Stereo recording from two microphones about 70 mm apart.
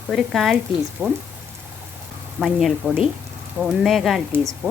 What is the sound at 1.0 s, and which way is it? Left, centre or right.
Speech, right.